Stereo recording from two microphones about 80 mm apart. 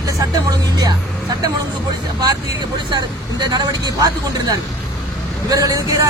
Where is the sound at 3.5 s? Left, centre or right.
Right.